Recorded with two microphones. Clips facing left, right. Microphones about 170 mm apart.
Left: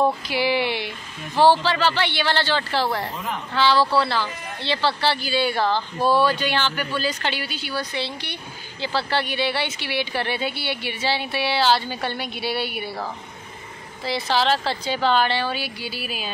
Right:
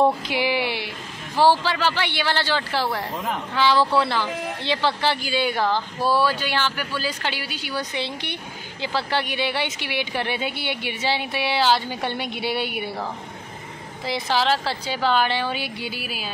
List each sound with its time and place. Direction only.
0.0 s a woman's voice: 20° right (ahead or behind)
5.9 s speech: 20° left (ahead or behind)
6.2 s a woman's voice: 5° right (ahead or behind)
14.0 s a woman's voice: 15° right (ahead or behind)